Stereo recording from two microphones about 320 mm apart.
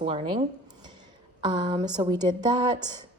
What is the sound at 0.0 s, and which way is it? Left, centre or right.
Speech, centre.